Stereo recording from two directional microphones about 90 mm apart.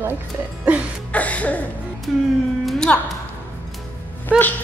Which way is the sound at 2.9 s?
15° left (ahead or behind).